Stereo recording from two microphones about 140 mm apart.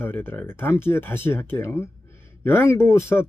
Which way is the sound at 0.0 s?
15° left (ahead or behind).